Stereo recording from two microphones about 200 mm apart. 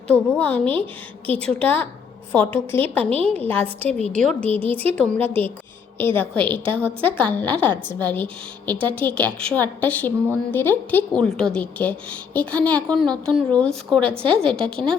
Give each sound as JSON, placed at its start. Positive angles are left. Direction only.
{"t": 0.1, "sound": "a woman's voice", "side_deg": 10}
{"t": 3.0, "sound": "a woman's voice", "side_deg": -30}
{"t": 3.2, "sound": "a woman's voice", "side_deg": 10}